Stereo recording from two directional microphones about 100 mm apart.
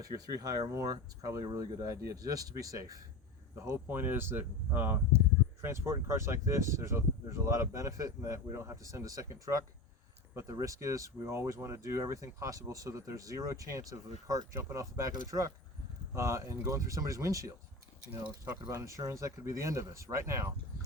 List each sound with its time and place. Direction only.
0.0 s speech: 40° right (ahead or behind)
3.5 s speech: 25° right (ahead or behind)
18.7 s speech: 30° right (ahead or behind)